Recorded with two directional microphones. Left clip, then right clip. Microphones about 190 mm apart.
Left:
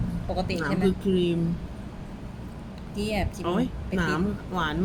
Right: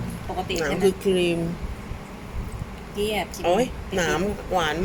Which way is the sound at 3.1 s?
20° left (ahead or behind).